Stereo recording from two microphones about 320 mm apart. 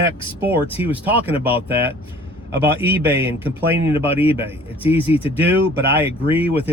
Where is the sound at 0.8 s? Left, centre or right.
Centre.